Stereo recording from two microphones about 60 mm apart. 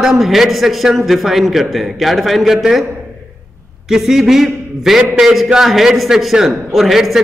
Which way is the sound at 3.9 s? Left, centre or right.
Centre.